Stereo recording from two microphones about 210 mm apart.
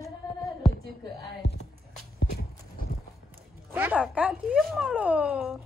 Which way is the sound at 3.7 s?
10° right (ahead or behind).